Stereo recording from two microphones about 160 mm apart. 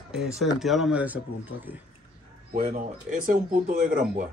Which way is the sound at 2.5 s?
55° right (ahead or behind).